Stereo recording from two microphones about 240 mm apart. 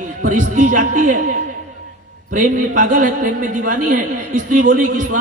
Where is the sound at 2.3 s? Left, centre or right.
Right.